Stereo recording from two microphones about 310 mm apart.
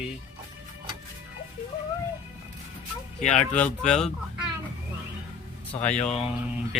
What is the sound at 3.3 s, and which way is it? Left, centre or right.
Speech, centre.